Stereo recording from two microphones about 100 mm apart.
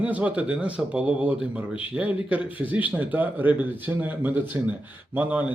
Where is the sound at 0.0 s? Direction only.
15° right (ahead or behind).